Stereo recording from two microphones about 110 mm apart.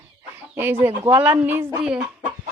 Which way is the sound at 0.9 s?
55° right (ahead or behind).